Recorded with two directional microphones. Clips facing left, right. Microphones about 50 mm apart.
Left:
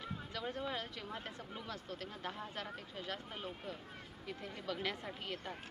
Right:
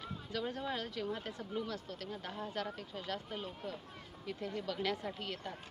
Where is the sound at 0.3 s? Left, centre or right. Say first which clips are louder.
Right 3 dB; centre.